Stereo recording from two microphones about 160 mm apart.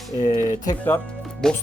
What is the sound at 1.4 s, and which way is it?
Speech, 5° left (ahead or behind).